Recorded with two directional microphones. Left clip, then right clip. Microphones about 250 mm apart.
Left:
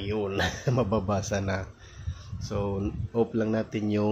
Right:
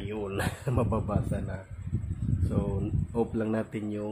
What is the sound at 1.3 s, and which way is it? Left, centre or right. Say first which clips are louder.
Speech: left 8 dB; left.